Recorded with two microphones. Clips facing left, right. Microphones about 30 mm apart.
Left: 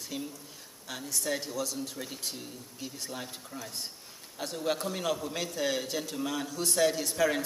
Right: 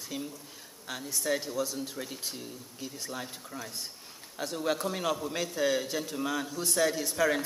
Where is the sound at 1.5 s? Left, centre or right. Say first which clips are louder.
Right 2 dB; centre.